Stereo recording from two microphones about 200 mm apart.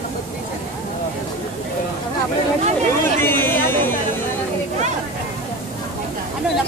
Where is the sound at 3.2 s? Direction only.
10° left (ahead or behind).